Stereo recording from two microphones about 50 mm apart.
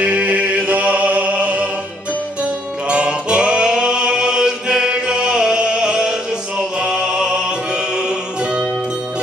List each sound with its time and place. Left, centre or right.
0.0 s music: right
2.9 s music: centre